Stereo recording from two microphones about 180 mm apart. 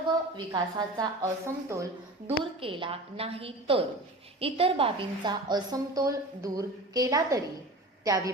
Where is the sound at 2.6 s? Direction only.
30° right (ahead or behind).